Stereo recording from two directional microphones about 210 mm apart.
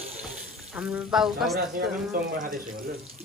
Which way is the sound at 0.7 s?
5° right (ahead or behind).